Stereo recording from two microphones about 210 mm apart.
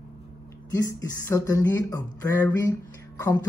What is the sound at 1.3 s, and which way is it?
Speech, 15° left (ahead or behind).